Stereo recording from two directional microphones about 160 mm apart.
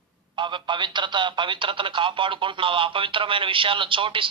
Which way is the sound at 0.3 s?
30° right (ahead or behind).